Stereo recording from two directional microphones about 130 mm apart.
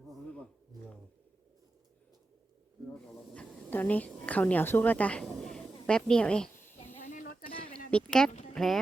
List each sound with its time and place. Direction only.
3.3 s a woman's voice: 10° left (ahead or behind)
6.6 s snake: 15° left (ahead or behind)
7.0 s snake: 90° left
7.9 s a sound: 5° left (ahead or behind)
8.5 s speech: 5° left (ahead or behind)